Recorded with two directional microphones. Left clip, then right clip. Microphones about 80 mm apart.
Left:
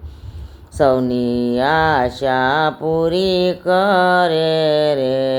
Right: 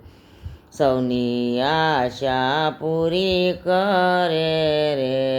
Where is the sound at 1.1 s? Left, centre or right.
Left.